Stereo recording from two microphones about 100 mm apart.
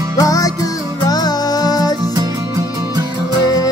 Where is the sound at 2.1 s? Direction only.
40° right (ahead or behind).